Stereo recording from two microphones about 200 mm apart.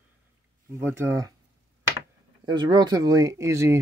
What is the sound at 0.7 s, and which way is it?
Speech, 15° right (ahead or behind).